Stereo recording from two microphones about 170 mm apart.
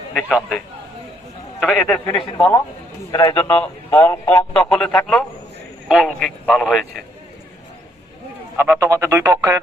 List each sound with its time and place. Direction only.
0.1 s a man's voice: centre (ahead or behind)
1.6 s a man's voice: centre (ahead or behind)
2.2 s a man's voice: 20° left (ahead or behind)
3.4 s speech: 10° left (ahead or behind)
4.7 s a man's voice: 5° left (ahead or behind)
8.5 s speech: 15° right (ahead or behind)